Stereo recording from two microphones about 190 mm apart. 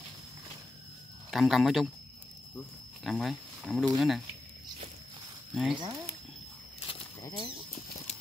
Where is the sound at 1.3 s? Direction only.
Centre (ahead or behind).